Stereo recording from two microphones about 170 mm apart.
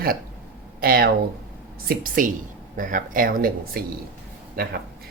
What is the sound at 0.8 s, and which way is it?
Speech, 60° right (ahead or behind).